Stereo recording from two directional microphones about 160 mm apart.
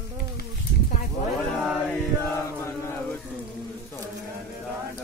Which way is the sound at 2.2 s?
15° left (ahead or behind).